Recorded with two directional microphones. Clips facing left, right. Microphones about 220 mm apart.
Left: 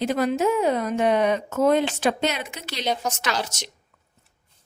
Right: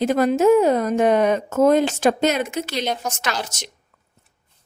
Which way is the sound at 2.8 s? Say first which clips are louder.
Even; centre (ahead or behind).